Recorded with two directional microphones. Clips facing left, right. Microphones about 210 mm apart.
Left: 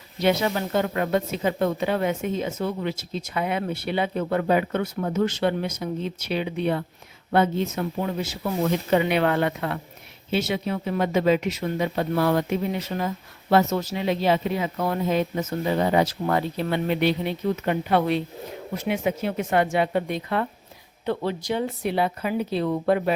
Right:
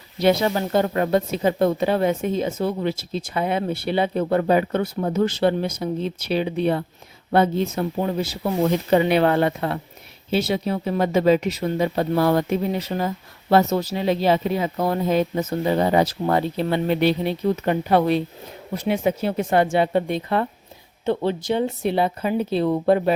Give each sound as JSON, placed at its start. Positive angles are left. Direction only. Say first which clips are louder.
{"t": 0.2, "sound": "a woman's voice", "louder": "right 3 dB", "side_deg": -35}